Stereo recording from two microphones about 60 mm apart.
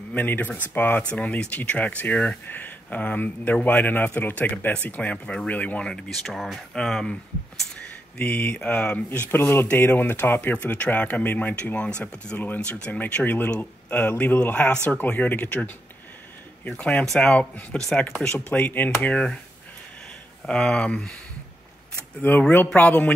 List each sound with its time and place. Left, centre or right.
0.1 s speech: left
5.9 s speech: centre
8.2 s speech: left
9.4 s speech: left
10.5 s speech: left
13.1 s speech: left; by 18.0 s centre
18.5 s speech: left
20.4 s speech: centre
22.3 s speech: left